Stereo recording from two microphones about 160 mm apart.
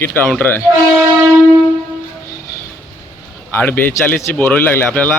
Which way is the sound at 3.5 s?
10° left (ahead or behind).